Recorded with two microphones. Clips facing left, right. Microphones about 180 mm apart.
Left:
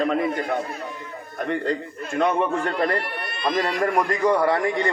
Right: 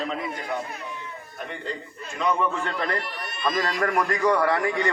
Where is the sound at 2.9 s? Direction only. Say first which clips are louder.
Left 4 dB; 55° left (ahead or behind).